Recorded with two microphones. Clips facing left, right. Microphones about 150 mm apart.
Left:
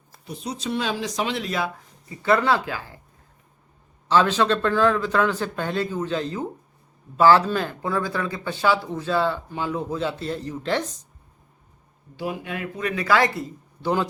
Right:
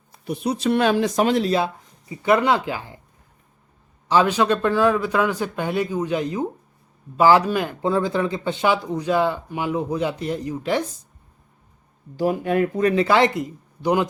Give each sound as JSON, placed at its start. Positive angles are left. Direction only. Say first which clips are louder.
{"t": 0.3, "sound": "speech", "louder": "right 8 dB", "side_deg": -65}
{"t": 2.0, "sound": "speech", "louder": "right 2 dB", "side_deg": -15}
{"t": 4.1, "sound": "speech", "louder": "right 1 dB", "side_deg": -10}
{"t": 12.1, "sound": "speech", "louder": "right 9 dB", "side_deg": -40}
{"t": 13.0, "sound": "speech", "louder": "even", "side_deg": -20}